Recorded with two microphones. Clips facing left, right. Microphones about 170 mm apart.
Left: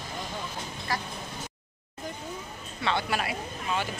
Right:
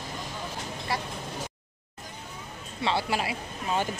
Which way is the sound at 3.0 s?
25° right (ahead or behind).